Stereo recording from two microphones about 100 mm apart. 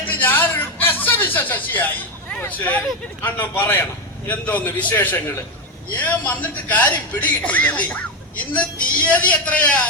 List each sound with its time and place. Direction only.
0.0 s chuckle: 20° left (ahead or behind)
2.4 s a man's voice: 15° left (ahead or behind)